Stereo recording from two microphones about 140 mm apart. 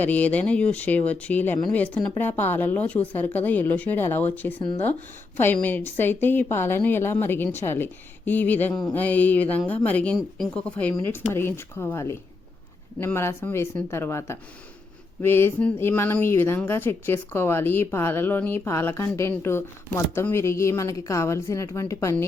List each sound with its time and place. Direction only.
0.0 s speech: 10° left (ahead or behind)
5.6 s a woman's voice: 15° left (ahead or behind)